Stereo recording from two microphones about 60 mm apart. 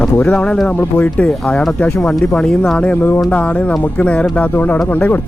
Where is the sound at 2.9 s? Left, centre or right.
Left.